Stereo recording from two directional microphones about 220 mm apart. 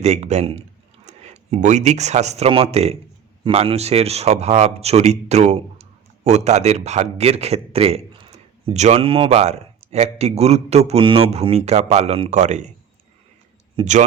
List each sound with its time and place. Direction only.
0.0 s a man's voice: 30° right (ahead or behind)
13.7 s a man's voice: 35° right (ahead or behind)